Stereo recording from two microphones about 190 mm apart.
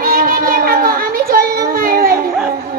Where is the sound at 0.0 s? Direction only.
50° right (ahead or behind).